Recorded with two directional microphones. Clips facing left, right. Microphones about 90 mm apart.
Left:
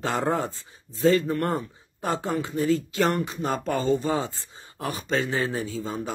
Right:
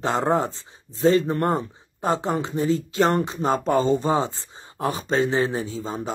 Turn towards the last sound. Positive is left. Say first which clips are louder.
# right 1 dB
turn(degrees=-25)  # may be behind; listen again after turning